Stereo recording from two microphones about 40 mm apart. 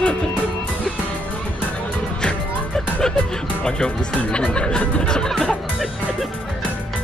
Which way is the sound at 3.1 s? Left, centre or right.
Centre.